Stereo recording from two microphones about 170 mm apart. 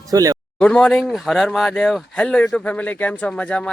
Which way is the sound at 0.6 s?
5° left (ahead or behind).